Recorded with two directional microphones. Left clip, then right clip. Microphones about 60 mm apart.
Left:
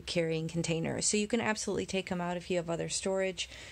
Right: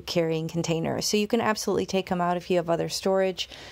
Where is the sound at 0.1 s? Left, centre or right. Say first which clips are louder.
Right 6 dB; right.